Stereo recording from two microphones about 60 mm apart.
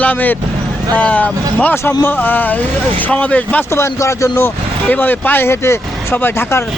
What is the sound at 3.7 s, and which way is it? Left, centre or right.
Speech, left.